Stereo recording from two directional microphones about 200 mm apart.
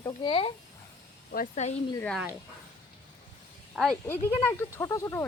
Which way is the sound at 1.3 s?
40° left (ahead or behind).